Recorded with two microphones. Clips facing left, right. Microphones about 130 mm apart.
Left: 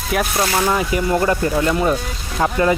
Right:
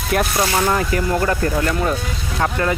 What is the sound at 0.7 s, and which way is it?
Speech, 10° left (ahead or behind).